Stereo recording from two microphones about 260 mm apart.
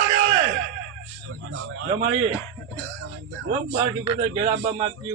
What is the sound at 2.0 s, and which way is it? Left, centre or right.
Speech, right.